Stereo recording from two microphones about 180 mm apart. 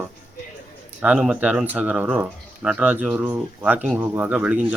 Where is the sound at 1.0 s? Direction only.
5° right (ahead or behind).